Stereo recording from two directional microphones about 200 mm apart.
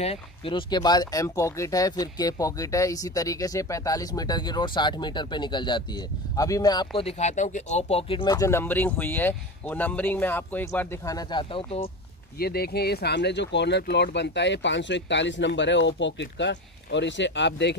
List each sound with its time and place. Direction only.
0.0 s speech: 30° left (ahead or behind)
7.0 s speech: 35° left (ahead or behind)
12.4 s speech: 50° left (ahead or behind)